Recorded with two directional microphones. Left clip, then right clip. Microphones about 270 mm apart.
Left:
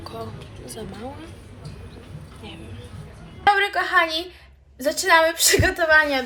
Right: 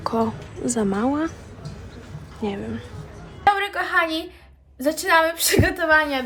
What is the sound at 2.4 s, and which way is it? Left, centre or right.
Speech, right.